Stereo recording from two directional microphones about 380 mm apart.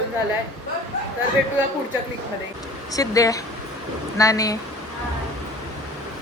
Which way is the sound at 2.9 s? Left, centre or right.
Centre.